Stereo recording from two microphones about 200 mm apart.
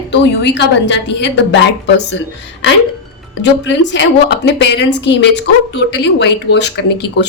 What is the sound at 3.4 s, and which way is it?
A woman's voice, 60° left (ahead or behind).